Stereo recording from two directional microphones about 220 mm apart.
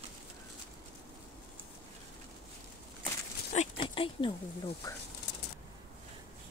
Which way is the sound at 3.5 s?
30° left (ahead or behind).